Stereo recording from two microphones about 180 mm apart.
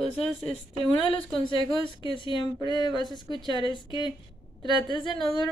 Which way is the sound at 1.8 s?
30° left (ahead or behind).